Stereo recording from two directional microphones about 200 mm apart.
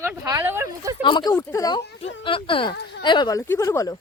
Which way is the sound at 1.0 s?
20° left (ahead or behind).